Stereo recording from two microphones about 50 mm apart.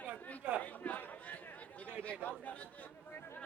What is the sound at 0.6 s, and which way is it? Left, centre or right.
Chatter, left.